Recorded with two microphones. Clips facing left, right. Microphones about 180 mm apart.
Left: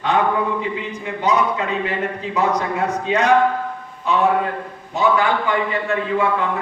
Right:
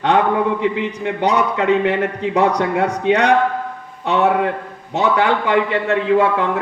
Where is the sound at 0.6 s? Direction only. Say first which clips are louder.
Right 6 dB; 70° right (ahead or behind).